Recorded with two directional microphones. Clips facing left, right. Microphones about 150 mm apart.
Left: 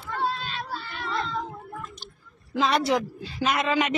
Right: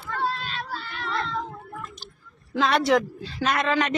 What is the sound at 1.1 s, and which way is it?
Cat, 5° left (ahead or behind).